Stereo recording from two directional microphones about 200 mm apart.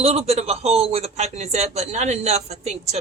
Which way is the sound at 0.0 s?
30° right (ahead or behind).